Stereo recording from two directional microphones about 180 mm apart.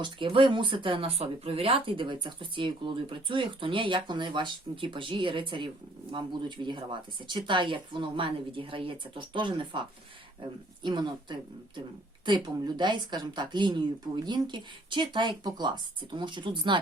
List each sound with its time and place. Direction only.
0.0 s speech: 30° right (ahead or behind)
10.8 s speech: 25° right (ahead or behind)